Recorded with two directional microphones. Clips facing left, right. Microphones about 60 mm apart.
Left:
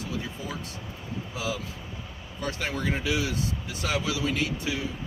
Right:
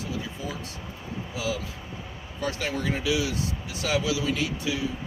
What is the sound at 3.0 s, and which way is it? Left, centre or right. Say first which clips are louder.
Speech: right 1 dB; left.